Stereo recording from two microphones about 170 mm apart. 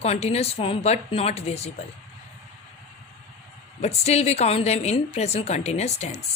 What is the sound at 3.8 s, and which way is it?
A man's voice, 40° left (ahead or behind).